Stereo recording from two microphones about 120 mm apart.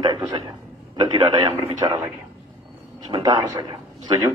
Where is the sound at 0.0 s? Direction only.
40° right (ahead or behind).